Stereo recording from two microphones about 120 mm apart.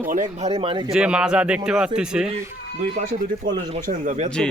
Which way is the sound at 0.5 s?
50° right (ahead or behind).